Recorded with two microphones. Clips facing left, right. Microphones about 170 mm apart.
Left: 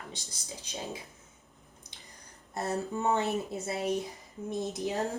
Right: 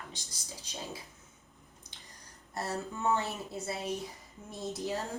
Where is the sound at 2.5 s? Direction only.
20° left (ahead or behind).